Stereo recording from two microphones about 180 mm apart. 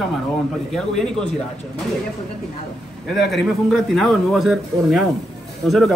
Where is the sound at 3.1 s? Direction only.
Centre (ahead or behind).